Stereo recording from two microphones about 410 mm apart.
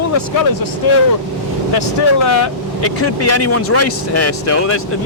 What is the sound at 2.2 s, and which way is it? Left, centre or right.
Speech, left.